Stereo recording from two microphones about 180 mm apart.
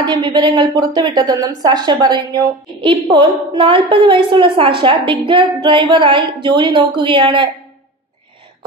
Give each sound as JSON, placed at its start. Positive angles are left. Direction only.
{"t": 0.0, "sound": "a woman's voice", "side_deg": -25}